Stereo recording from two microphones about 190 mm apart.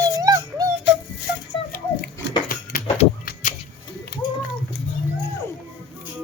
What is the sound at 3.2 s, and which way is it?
Vehicle, 45° left (ahead or behind).